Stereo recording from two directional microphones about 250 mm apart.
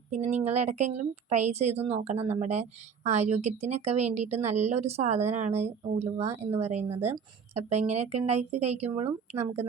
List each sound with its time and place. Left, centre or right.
0.1 s a woman's voice: right